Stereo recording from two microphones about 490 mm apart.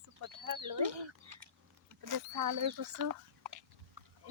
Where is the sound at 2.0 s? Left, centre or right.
Right.